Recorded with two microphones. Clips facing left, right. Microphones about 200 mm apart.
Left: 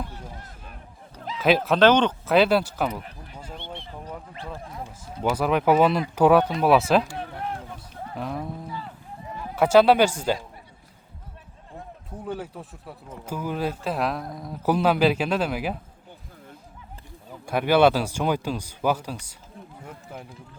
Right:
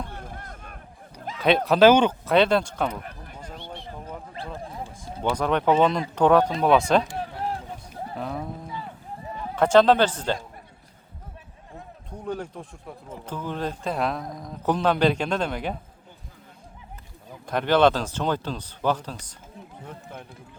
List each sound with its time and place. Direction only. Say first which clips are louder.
0.1 s a sound: right 2 dB; 55° right (ahead or behind)
1.4 s speech: right 1 dB; centre (ahead or behind)
2.2 s speech: left 1 dB; 5° left (ahead or behind)
3.0 s a sound: right 2 dB; 50° right (ahead or behind)
4.6 s a sound: right 2 dB; 30° right (ahead or behind)
5.3 s speech: left 1 dB; 5° left (ahead or behind)
8.1 s speech: left 1 dB; centre (ahead or behind)
9.6 s speech: left 1 dB; 10° left (ahead or behind)
12.1 s speech: right 1 dB; 5° left (ahead or behind)
17.4 s speech: left 1 dB; 10° left (ahead or behind)